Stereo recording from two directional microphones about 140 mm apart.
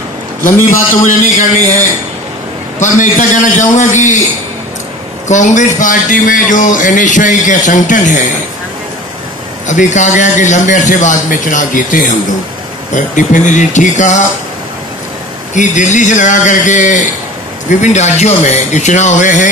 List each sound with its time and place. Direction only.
0.5 s a man's voice: 15° left (ahead or behind)
1.2 s a sound: 70° left (ahead or behind)
2.8 s a man's voice: 65° left (ahead or behind)
5.3 s a man's voice: 60° left (ahead or behind)
9.7 s a man's voice: 60° left (ahead or behind)
15.5 s a man's voice: 60° left (ahead or behind)